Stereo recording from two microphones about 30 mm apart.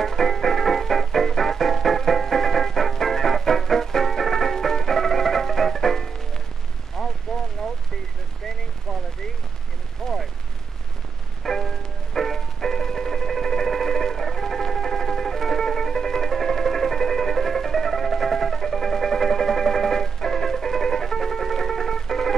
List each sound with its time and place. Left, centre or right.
0.0 s music: centre
7.0 s rain: centre
10.0 s artillery fire: centre
11.4 s music: centre